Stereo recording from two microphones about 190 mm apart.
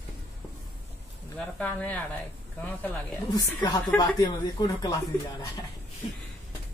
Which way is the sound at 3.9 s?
20° left (ahead or behind).